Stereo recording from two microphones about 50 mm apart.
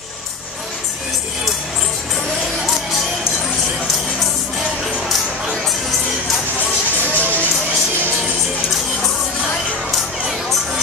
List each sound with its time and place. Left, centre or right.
7.2 s music: left